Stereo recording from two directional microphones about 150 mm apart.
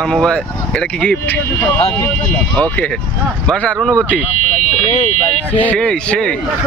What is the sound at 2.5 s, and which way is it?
Speech, 5° left (ahead or behind).